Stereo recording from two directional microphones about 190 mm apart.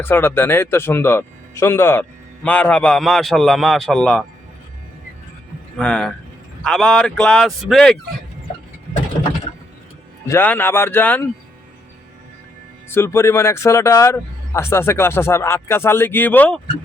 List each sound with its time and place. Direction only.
0.0 s speech: 10° left (ahead or behind)
5.7 s speech: 5° left (ahead or behind)
10.2 s speech: 10° left (ahead or behind)
12.9 s speech: 15° left (ahead or behind)